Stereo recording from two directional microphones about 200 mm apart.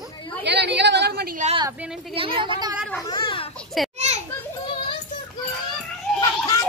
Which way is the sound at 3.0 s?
25° left (ahead or behind).